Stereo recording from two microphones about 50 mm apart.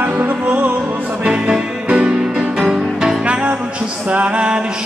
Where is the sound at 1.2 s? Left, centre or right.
Centre.